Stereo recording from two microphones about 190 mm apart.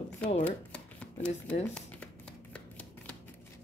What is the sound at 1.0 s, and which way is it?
Speech, 5° left (ahead or behind).